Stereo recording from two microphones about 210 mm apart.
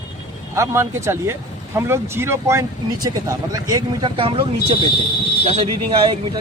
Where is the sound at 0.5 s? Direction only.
15° right (ahead or behind).